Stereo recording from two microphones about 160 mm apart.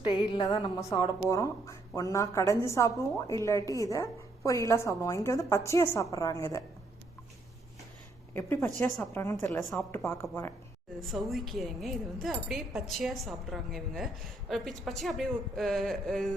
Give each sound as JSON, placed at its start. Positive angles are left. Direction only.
{"t": 0.0, "sound": "a woman's voice", "side_deg": 30}
{"t": 8.3, "sound": "a woman's voice", "side_deg": 15}
{"t": 9.5, "sound": "speech", "side_deg": 0}
{"t": 9.9, "sound": "a woman's voice", "side_deg": 15}
{"t": 11.1, "sound": "speech", "side_deg": 0}